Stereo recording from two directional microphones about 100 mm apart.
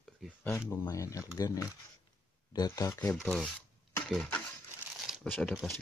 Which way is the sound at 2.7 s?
35° left (ahead or behind).